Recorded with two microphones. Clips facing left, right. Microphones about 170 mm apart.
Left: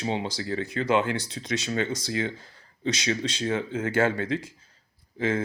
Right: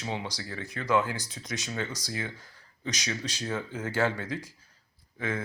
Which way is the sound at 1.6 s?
70° left (ahead or behind).